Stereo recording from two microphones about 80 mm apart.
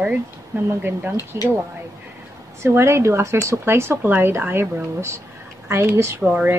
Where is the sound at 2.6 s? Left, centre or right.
Right.